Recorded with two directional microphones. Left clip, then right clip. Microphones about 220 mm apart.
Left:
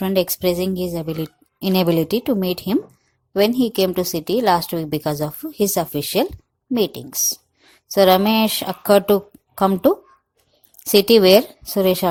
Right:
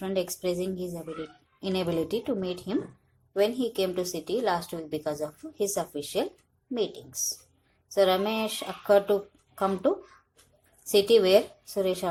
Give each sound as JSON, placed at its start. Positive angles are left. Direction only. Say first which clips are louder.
{"t": 0.0, "sound": "a woman's voice", "louder": "left 10 dB", "side_deg": 45}